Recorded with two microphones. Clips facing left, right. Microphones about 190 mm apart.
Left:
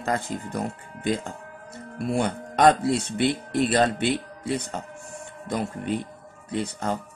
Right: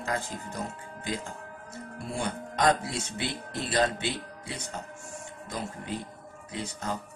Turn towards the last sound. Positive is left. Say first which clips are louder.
# left 7 dB
turn(degrees=55)  # may be behind; listen again after turning